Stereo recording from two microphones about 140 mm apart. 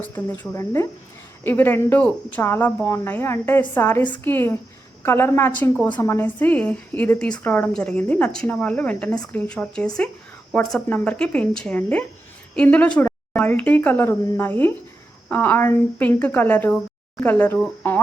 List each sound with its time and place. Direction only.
0.0 s a woman's voice: 10° left (ahead or behind)